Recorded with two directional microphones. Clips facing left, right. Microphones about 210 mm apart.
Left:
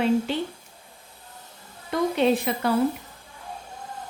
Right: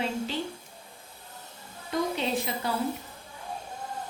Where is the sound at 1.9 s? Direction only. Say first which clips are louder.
Left 7 dB; 60° left (ahead or behind).